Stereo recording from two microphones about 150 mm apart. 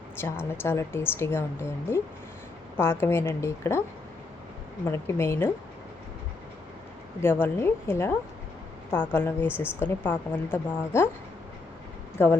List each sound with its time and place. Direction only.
0.2 s a woman's voice: 15° left (ahead or behind)
4.9 s a woman's voice: 15° left (ahead or behind)
7.2 s a woman's voice: 15° left (ahead or behind)